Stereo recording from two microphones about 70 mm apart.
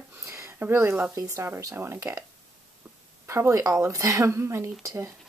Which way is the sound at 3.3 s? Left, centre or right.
Right.